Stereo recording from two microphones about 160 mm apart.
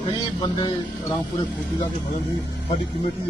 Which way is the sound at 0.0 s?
30° left (ahead or behind).